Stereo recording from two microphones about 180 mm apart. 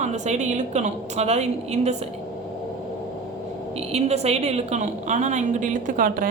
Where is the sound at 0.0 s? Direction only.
40° right (ahead or behind).